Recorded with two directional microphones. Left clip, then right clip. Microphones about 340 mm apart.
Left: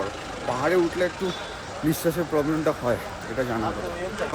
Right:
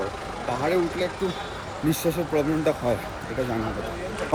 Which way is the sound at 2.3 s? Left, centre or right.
Left.